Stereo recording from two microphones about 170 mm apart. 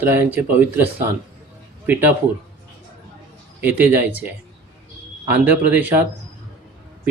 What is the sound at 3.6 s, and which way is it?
Speech, 10° right (ahead or behind).